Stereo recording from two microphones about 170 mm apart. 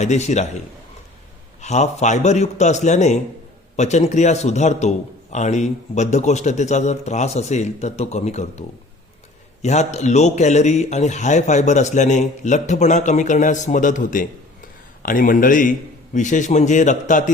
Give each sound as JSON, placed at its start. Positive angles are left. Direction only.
{"t": 0.0, "sound": "a man's voice", "side_deg": 40}
{"t": 1.6, "sound": "a man's voice", "side_deg": 40}
{"t": 9.6, "sound": "a man's voice", "side_deg": 40}